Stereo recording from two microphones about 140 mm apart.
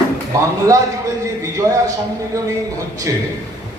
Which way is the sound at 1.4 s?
25° right (ahead or behind).